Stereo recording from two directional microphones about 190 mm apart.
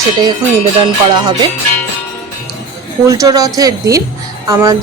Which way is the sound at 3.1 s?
20° right (ahead or behind).